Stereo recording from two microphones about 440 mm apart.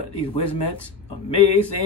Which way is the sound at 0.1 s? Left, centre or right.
Left.